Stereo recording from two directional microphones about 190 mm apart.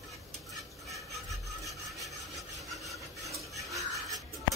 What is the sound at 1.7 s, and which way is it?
Rub, centre (ahead or behind).